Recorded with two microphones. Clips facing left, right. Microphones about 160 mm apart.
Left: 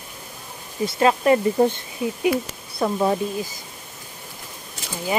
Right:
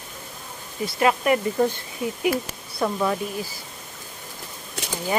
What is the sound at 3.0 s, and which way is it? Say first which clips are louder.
Speech: left 3 dB; 25° left (ahead or behind).